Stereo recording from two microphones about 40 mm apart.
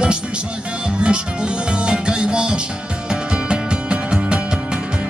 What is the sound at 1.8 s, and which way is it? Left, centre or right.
Music, right.